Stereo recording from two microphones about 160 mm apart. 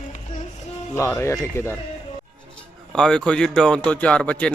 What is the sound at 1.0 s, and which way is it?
Speech, 15° left (ahead or behind).